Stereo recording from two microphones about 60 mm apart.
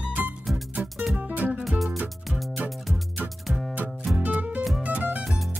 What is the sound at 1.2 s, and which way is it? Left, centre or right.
Music, right.